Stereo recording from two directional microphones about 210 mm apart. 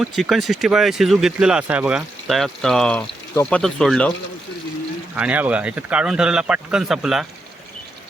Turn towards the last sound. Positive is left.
turn(degrees=0)  # may be behind; listen again after turning